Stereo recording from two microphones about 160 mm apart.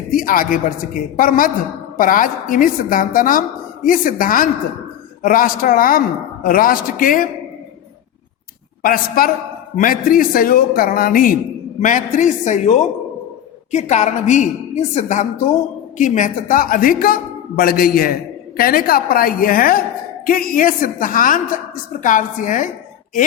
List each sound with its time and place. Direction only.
0.2 s a woman's voice: 60° left (ahead or behind)
8.8 s a woman's voice: 65° left (ahead or behind)